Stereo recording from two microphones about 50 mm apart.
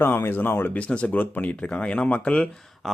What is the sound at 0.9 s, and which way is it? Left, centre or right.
Speech, left.